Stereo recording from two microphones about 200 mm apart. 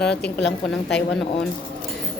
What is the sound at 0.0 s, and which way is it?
Speech, 5° left (ahead or behind).